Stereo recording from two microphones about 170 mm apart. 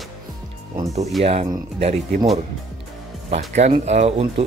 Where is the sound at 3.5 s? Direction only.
40° right (ahead or behind).